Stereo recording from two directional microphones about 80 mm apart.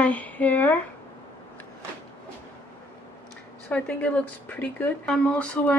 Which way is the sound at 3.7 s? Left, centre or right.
Centre.